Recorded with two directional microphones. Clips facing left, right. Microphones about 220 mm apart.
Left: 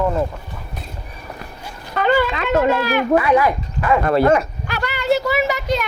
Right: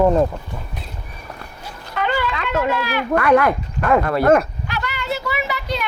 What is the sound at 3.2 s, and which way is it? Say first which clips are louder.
Speech: right 5 dB; 60° right (ahead or behind).